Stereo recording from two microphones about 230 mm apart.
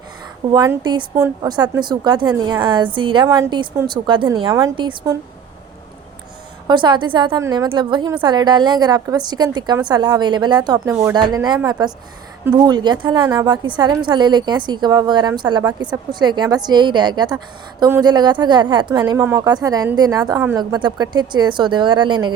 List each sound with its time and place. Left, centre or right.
0.5 s a woman's voice: centre
6.7 s a woman's voice: centre